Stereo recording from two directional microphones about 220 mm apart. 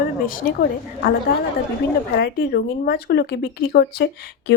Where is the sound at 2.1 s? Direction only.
45° left (ahead or behind).